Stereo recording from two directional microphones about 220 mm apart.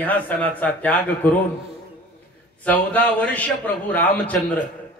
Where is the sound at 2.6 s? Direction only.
10° left (ahead or behind).